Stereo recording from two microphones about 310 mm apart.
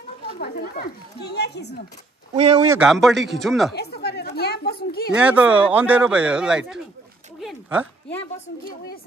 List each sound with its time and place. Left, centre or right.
0.4 s a woman's voice: left
2.3 s speech: right
2.7 s speech: centre
3.7 s speech: left
5.1 s speech: centre